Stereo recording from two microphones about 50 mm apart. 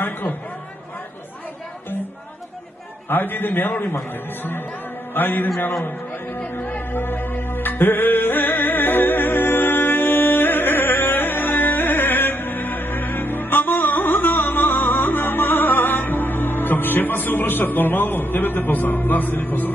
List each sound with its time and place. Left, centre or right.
3.1 s a man's voice: left
6.5 s music: left